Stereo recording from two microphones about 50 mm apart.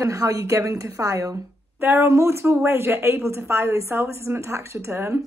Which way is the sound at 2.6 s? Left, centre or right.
Right.